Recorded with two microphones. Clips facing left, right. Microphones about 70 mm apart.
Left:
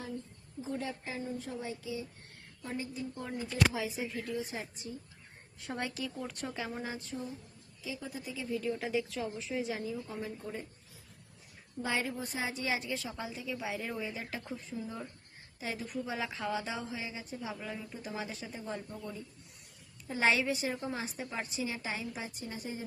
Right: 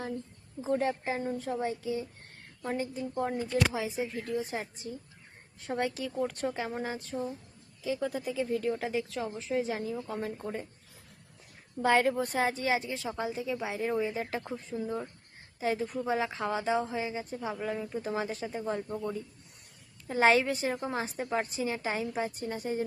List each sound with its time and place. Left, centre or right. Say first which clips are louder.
0.6 s a woman's voice: right 9 dB; right
3.7 s a woman's voice: right 3 dB; right
6.7 s a woman's voice: right 5 dB; right
10.4 s a woman's voice: right 4 dB; right
11.8 s a woman's voice: right 9 dB; right
12.6 s a woman's voice: right 5 dB; right
14.7 s speech: right 6 dB; centre
15.6 s a woman's voice: right 7 dB; right
20.1 s a woman's voice: right 5 dB; right